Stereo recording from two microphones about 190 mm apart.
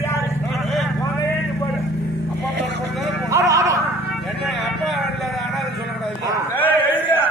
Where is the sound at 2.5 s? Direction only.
65° right (ahead or behind).